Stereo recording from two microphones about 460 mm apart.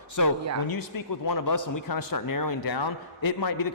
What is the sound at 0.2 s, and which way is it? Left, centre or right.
A man's voice, left.